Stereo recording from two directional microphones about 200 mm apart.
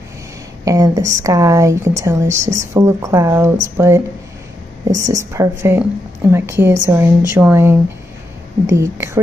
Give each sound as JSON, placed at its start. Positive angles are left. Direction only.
{"t": 0.7, "sound": "speech", "side_deg": -15}
{"t": 8.7, "sound": "speech", "side_deg": -15}